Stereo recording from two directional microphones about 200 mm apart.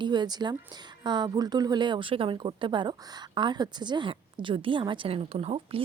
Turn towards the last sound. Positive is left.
turn(degrees=-30)  # may be behind; listen again after turning